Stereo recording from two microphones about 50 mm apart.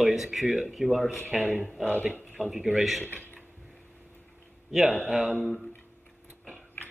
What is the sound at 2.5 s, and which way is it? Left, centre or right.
Speech, centre.